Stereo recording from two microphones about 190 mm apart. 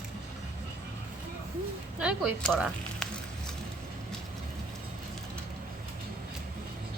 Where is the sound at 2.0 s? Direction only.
5° right (ahead or behind).